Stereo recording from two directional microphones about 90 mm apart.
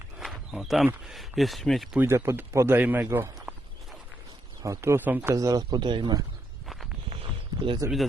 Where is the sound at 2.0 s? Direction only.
30° right (ahead or behind).